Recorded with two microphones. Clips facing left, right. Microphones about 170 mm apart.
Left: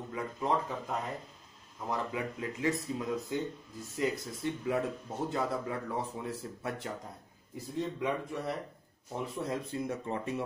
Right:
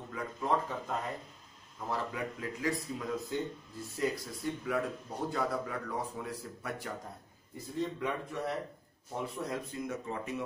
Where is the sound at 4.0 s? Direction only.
25° left (ahead or behind).